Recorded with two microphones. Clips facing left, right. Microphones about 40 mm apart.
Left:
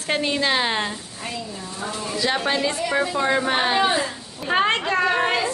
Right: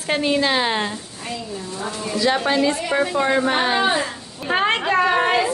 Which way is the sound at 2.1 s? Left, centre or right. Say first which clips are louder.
Right 4 dB; centre.